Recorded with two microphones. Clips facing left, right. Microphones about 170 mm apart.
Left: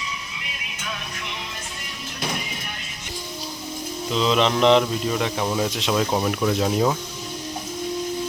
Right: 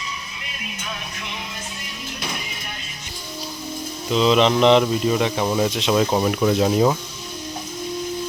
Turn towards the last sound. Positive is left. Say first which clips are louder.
# right 3 dB
turn(degrees=-5)  # may be behind; listen again after turning